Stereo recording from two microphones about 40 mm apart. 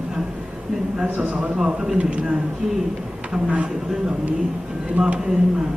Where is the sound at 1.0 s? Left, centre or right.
Right.